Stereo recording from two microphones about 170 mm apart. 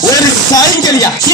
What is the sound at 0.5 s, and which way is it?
Speech, 20° left (ahead or behind).